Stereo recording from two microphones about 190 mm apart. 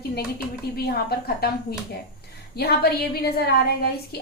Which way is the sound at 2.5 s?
55° left (ahead or behind).